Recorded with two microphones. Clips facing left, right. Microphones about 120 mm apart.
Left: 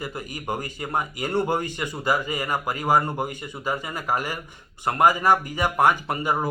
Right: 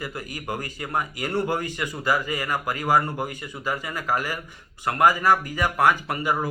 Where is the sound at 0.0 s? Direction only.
25° left (ahead or behind).